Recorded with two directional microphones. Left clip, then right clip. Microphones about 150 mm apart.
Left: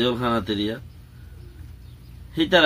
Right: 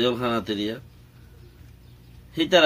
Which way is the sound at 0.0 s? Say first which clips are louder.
Left 1 dB; 15° right (ahead or behind).